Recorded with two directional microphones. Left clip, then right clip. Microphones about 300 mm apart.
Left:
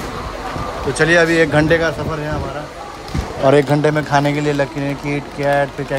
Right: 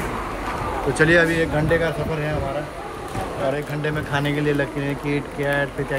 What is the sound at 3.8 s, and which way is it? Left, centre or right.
Speech, centre.